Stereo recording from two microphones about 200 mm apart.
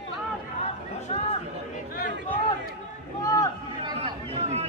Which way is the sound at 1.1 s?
30° left (ahead or behind).